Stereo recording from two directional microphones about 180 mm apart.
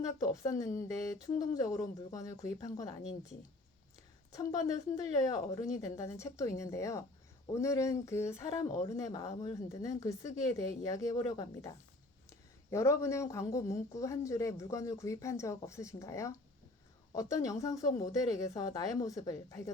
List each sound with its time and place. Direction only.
0.0 s speech: 20° left (ahead or behind)
4.3 s speech: 20° left (ahead or behind)
12.7 s speech: 15° left (ahead or behind)